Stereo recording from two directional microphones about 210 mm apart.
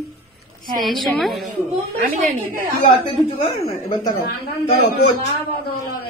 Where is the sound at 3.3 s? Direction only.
20° left (ahead or behind).